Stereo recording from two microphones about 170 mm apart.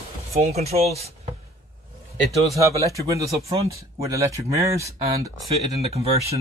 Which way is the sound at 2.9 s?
20° right (ahead or behind).